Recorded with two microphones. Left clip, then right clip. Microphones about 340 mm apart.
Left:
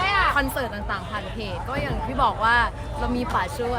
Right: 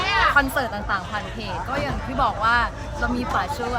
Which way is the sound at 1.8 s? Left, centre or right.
Centre.